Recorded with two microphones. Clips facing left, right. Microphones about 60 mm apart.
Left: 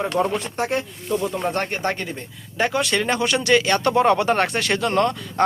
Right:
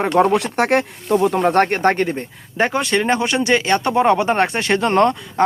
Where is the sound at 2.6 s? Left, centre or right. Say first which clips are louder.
Right 3 dB; right.